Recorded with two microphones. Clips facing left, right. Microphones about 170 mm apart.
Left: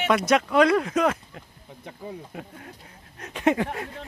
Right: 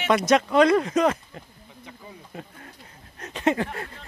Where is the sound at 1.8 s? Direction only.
55° left (ahead or behind).